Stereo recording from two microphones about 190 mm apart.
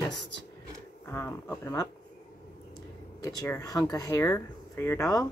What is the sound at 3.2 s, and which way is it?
Speech, 15° left (ahead or behind).